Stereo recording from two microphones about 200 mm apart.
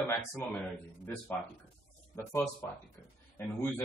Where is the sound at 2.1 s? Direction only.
15° left (ahead or behind).